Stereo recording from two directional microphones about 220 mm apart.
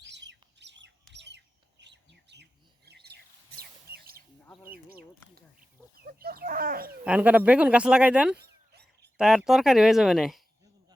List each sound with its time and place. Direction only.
0.0 s bird: 55° right (ahead or behind)
6.1 s speech: 45° right (ahead or behind)
7.0 s speech: 5° right (ahead or behind)
8.4 s a sound: 50° right (ahead or behind)
9.1 s speech: 5° right (ahead or behind)